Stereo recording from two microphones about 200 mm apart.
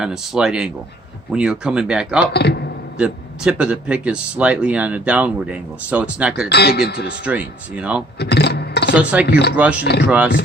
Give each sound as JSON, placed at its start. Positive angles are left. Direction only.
{"t": 0.0, "sound": "speech", "side_deg": -5}
{"t": 2.3, "sound": "a man's voice", "side_deg": 55}
{"t": 3.0, "sound": "speech", "side_deg": -5}
{"t": 6.5, "sound": "speech", "side_deg": 55}
{"t": 7.3, "sound": "speech", "side_deg": -5}
{"t": 8.2, "sound": "speech", "side_deg": 55}
{"t": 9.0, "sound": "speech", "side_deg": -5}
{"t": 9.2, "sound": "a man's voice", "side_deg": 55}
{"t": 10.1, "sound": "speech", "side_deg": -5}